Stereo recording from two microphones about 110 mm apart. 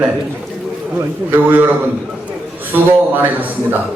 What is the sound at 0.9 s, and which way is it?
Speech, 20° right (ahead or behind).